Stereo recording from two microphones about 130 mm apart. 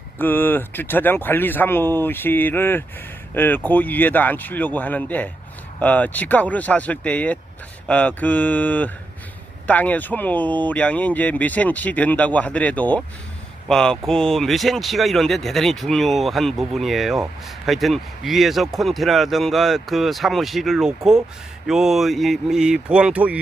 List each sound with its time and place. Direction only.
0.2 s speech: 15° left (ahead or behind); by 23.4 s 10° right (ahead or behind)